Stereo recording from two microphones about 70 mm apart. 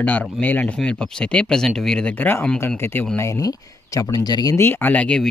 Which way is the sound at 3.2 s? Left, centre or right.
Left.